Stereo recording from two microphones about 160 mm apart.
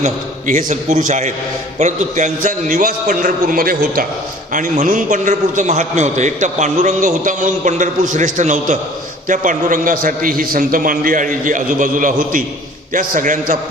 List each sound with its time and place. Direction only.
0.0 s a man's voice: 50° right (ahead or behind)